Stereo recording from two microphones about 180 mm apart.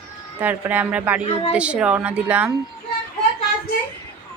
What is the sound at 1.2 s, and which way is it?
Speech, 35° left (ahead or behind).